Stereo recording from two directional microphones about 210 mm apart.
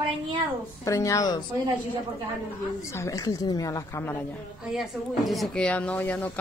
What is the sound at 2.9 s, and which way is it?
Speech, 15° left (ahead or behind).